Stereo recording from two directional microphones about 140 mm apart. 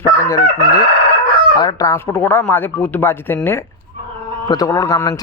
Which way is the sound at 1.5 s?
25° left (ahead or behind).